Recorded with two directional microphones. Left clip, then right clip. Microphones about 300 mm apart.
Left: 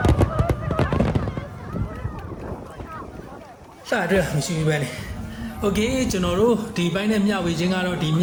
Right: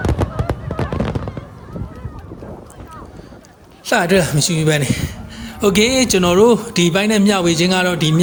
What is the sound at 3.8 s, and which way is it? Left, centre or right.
A man's voice, right.